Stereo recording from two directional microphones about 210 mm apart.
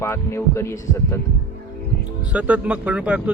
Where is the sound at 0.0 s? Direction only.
10° left (ahead or behind).